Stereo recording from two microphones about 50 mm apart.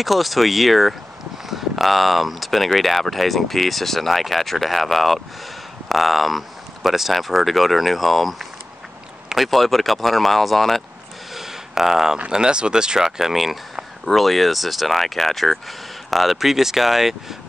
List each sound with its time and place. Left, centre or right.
0.0 s speech: centre
11.3 s a sound: centre
12.3 s speech: centre